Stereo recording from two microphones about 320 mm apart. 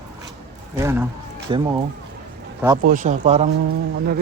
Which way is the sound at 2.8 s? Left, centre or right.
Right.